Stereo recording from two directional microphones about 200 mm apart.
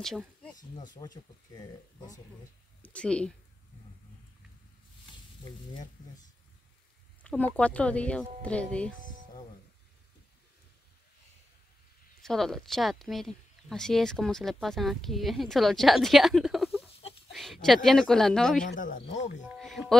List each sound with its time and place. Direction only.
0.9 s speech: 20° left (ahead or behind)
2.8 s speech: 5° left (ahead or behind)
7.2 s speech: 10° left (ahead or behind)
12.2 s speech: centre (ahead or behind)
18.8 s speech: 40° left (ahead or behind)
19.6 s speech: centre (ahead or behind)